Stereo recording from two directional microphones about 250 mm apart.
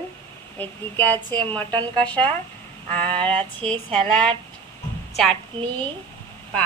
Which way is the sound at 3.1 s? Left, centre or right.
Centre.